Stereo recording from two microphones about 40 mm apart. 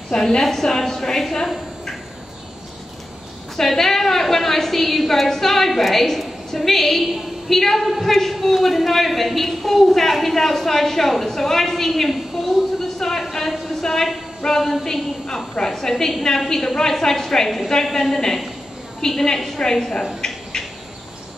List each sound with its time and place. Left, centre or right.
0.4 s a woman's voice: centre
3.5 s a woman's voice: centre
18.1 s a woman's voice: centre
20.2 s bird: centre